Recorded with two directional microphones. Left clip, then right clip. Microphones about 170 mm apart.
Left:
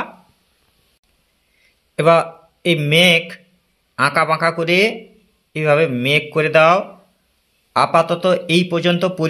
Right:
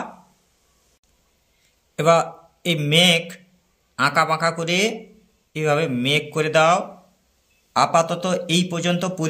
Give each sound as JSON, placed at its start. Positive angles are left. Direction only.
{"t": 2.0, "sound": "speech", "side_deg": 30}